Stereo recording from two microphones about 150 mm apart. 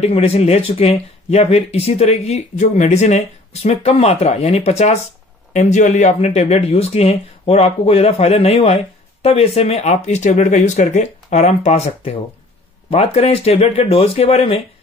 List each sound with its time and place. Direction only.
0.0 s speech: 40° left (ahead or behind)